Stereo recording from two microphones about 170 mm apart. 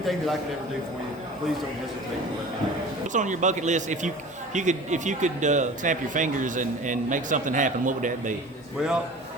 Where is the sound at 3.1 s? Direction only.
45° right (ahead or behind).